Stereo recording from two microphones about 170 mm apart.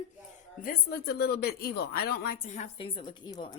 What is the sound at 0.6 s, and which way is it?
A woman's voice, 65° left (ahead or behind).